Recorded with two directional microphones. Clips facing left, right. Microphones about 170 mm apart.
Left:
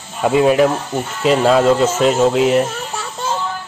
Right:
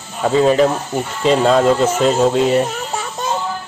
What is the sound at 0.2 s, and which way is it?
Speech, 10° left (ahead or behind).